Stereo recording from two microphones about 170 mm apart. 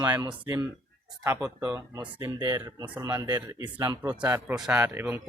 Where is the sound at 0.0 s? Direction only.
25° right (ahead or behind).